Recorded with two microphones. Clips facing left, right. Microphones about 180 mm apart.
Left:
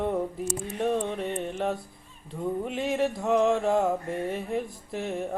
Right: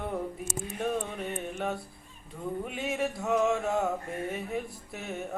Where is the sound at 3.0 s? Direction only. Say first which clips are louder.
Left 3 dB; 30° left (ahead or behind).